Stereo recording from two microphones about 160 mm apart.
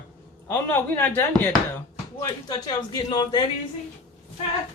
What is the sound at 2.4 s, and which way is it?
Speech, 25° left (ahead or behind).